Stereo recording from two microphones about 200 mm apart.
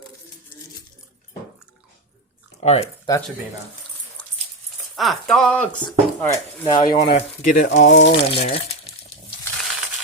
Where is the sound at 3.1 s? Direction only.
15° left (ahead or behind).